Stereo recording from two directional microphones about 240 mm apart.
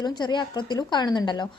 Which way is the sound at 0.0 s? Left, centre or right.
Centre.